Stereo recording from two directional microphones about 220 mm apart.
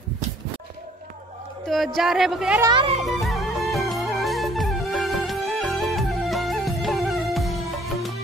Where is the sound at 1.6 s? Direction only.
Centre (ahead or behind).